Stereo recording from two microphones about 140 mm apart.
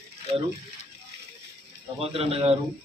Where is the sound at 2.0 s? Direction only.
45° right (ahead or behind).